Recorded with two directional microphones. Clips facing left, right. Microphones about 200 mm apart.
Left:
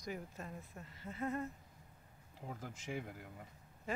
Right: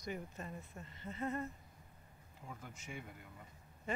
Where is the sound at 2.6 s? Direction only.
90° left.